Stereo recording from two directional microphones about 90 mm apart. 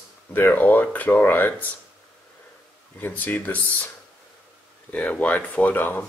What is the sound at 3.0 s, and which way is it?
Speech, 20° left (ahead or behind).